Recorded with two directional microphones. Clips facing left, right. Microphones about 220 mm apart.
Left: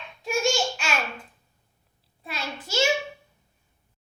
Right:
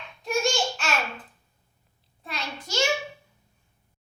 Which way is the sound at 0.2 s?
Centre (ahead or behind).